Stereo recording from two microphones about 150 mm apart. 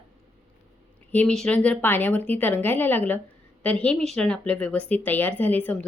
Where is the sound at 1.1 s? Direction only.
10° left (ahead or behind).